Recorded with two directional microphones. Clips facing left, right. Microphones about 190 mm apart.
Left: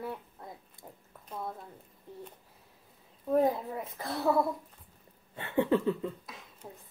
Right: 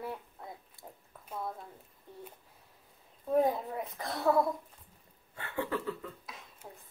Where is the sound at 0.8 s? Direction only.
20° left (ahead or behind).